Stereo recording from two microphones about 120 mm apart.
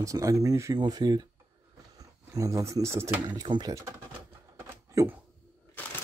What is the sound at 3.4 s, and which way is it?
Speech, 30° right (ahead or behind).